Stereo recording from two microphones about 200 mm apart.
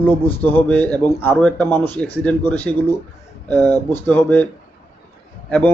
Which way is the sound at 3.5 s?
20° right (ahead or behind).